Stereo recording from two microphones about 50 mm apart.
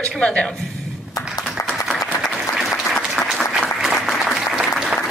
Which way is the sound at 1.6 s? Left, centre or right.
Left.